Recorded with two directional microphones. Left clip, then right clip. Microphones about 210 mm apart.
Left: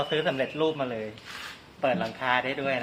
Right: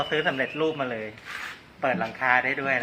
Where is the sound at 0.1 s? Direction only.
25° left (ahead or behind).